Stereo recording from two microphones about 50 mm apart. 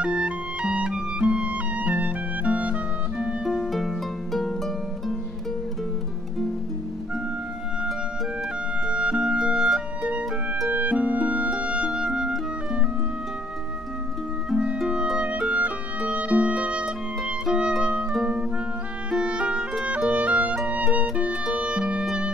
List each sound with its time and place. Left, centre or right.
0.0 s music: right
3.7 s harp: centre
8.8 s music: centre
10.7 s harp: right
11.5 s music: right
15.1 s music: right
19.0 s music: right
21.3 s music: centre